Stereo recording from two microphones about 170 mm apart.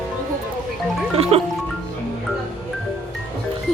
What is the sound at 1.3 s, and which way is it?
Music, 35° right (ahead or behind).